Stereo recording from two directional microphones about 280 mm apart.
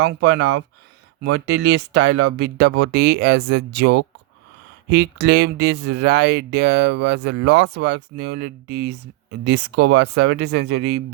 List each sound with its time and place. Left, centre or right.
0.0 s speech: right